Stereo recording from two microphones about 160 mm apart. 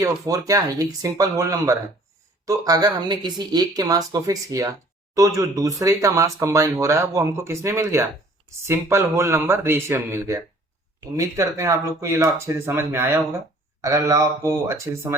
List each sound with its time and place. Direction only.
0.0 s speech: 20° right (ahead or behind)